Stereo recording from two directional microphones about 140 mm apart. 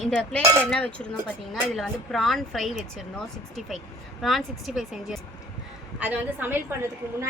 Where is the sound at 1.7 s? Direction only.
Centre (ahead or behind).